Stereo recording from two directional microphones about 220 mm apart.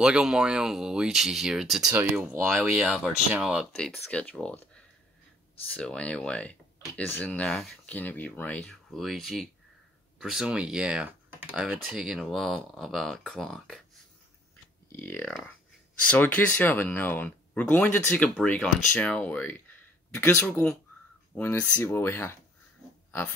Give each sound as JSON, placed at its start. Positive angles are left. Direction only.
{"t": 0.0, "sound": "speech", "side_deg": 0}
{"t": 5.8, "sound": "speech", "side_deg": 5}
{"t": 14.9, "sound": "speech", "side_deg": 10}